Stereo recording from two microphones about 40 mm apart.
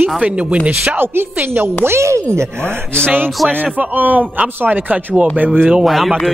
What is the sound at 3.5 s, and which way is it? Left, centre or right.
A man's voice, right.